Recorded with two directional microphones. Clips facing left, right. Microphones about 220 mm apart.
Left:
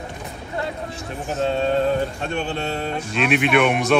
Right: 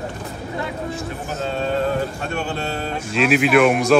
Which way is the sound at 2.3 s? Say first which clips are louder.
Left 1 dB; 30° left (ahead or behind).